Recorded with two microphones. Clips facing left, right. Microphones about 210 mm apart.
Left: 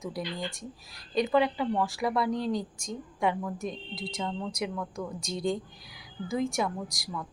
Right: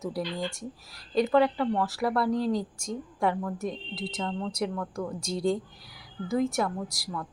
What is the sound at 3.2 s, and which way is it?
Speech, 20° left (ahead or behind).